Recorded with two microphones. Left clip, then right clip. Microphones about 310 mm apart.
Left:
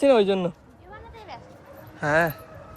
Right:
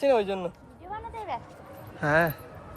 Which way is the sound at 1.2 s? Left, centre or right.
Right.